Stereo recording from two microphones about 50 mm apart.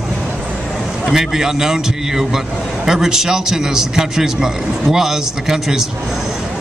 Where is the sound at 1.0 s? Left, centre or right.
Centre.